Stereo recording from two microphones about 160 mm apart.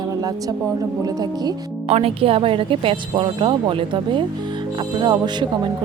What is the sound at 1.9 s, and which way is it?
A woman's voice, 40° right (ahead or behind).